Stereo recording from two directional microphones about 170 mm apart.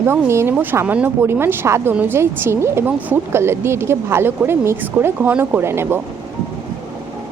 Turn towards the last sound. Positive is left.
turn(degrees=-15)  # may be behind; listen again after turning